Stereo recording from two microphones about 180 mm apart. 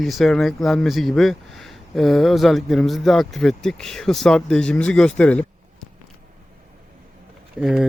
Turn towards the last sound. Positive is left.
turn(degrees=0)  # may be behind; listen again after turning